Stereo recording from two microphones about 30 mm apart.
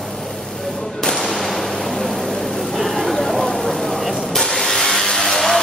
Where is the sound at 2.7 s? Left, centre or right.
Centre.